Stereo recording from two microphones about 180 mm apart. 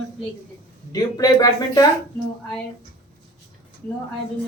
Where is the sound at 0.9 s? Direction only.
20° left (ahead or behind).